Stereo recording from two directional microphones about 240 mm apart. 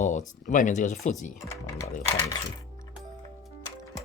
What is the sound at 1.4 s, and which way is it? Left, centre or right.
Speech, centre.